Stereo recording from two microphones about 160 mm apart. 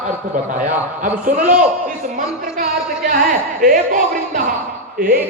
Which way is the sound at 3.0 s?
60° right (ahead or behind).